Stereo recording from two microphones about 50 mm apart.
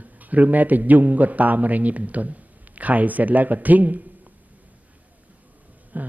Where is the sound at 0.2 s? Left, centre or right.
Right.